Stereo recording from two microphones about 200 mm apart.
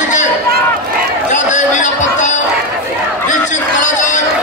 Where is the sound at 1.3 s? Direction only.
35° left (ahead or behind).